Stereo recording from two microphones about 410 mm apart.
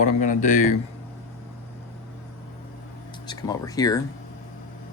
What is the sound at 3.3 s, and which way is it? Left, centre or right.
Speech, centre.